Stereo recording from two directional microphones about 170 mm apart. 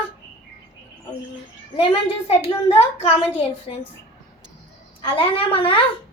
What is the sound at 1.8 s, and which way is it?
A child's voice, 35° left (ahead or behind).